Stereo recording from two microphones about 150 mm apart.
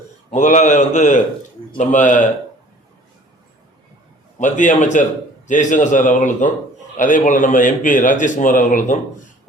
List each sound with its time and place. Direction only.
0.3 s a man's voice: 55° left (ahead or behind)
4.4 s a man's voice: 55° left (ahead or behind)